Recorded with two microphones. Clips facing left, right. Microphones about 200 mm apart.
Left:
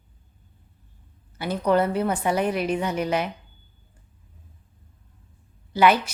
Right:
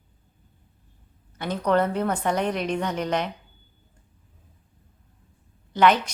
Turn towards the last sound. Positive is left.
turn(degrees=10)  # may be behind; listen again after turning